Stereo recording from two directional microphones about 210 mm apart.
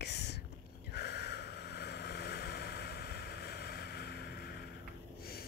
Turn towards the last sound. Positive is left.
turn(degrees=50)  # may be behind; listen again after turning